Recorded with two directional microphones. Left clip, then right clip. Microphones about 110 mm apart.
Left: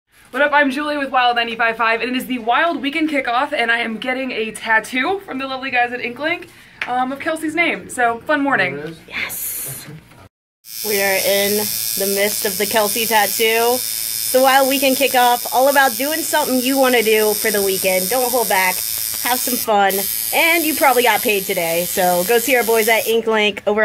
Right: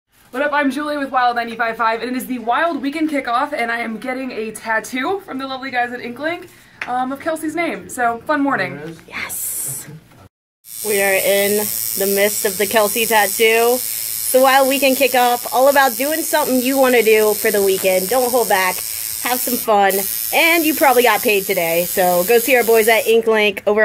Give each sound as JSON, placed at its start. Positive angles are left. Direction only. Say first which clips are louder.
{"t": 0.3, "sound": "speech", "louder": "left 3 dB", "side_deg": 5}
{"t": 11.1, "sound": "speech", "louder": "right 1 dB", "side_deg": -20}
{"t": 11.6, "sound": "speech", "louder": "even", "side_deg": -40}
{"t": 12.9, "sound": "speech", "louder": "right 1 dB", "side_deg": -15}
{"t": 13.7, "sound": "mains hum", "louder": "left 2 dB", "side_deg": -50}
{"t": 14.3, "sound": "speech", "louder": "right 1 dB", "side_deg": -15}
{"t": 17.6, "sound": "speech", "louder": "right 2 dB", "side_deg": -45}
{"t": 19.2, "sound": "speech", "louder": "right 1 dB", "side_deg": -20}
{"t": 20.3, "sound": "speech", "louder": "right 1 dB", "side_deg": -40}
{"t": 22.7, "sound": "speech", "louder": "right 3 dB", "side_deg": -35}